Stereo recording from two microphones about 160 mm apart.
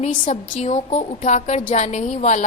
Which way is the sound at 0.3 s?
45° left (ahead or behind).